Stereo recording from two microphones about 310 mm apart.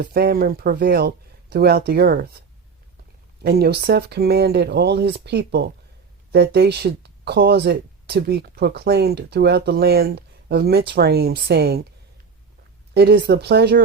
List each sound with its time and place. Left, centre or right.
0.0 s speech: right
3.4 s speech: right
12.9 s speech: right